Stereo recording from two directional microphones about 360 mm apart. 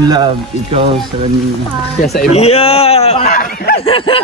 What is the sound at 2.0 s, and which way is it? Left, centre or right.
A man's voice, centre.